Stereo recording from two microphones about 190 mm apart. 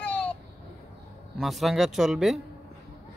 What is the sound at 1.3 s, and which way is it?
Speech, centre (ahead or behind).